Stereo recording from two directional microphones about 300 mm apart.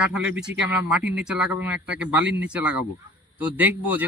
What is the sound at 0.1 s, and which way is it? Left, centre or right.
Speech, centre.